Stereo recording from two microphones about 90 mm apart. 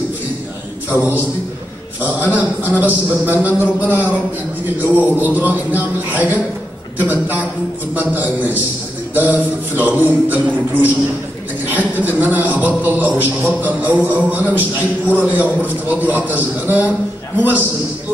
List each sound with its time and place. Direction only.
0.8 s a man's voice: 20° right (ahead or behind)